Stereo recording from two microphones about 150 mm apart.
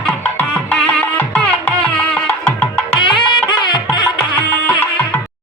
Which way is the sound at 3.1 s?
30° left (ahead or behind).